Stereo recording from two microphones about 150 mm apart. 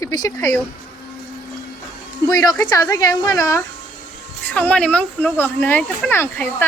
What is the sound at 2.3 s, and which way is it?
Speech, 25° left (ahead or behind).